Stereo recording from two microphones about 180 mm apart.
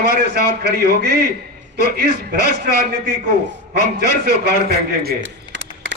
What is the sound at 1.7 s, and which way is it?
Speech, 65° right (ahead or behind).